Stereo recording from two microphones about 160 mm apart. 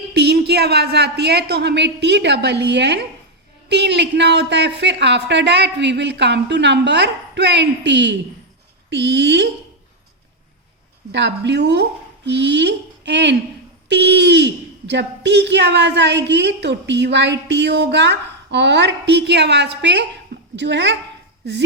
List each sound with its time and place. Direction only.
0.1 s a woman's voice: 90° right
11.1 s a woman's voice: 90° right